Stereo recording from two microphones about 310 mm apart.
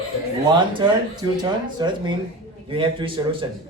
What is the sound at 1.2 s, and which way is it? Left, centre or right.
Speech, centre.